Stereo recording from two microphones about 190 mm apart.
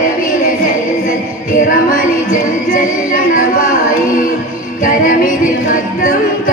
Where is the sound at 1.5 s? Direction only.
45° left (ahead or behind).